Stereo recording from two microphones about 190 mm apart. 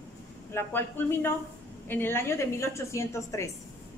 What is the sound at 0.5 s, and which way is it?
A woman's voice, 10° left (ahead or behind).